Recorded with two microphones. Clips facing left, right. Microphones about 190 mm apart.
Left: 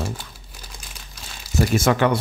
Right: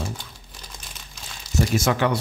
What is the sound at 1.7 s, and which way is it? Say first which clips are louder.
Speech: left 3 dB; 55° left (ahead or behind).